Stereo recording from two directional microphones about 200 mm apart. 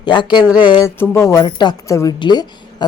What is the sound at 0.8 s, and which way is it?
Speech, 15° left (ahead or behind).